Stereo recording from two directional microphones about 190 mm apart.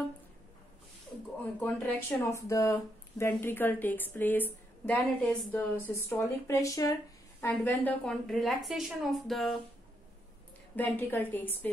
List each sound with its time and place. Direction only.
1.4 s speech: 10° left (ahead or behind)
10.8 s speech: 10° left (ahead or behind)